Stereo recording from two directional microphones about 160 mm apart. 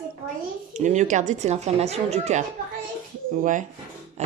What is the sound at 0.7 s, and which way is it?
Speech, 50° right (ahead or behind).